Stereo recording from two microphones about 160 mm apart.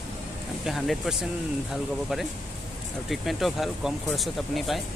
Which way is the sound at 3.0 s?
Centre (ahead or behind).